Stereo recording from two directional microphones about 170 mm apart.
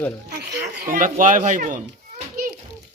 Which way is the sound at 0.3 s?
75° right (ahead or behind).